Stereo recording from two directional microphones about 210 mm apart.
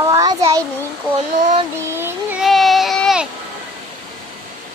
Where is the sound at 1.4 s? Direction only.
35° right (ahead or behind).